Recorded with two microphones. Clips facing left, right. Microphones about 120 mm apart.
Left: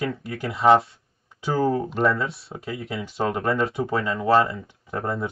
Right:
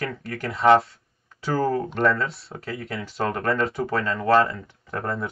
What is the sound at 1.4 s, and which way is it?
Speech, 15° left (ahead or behind).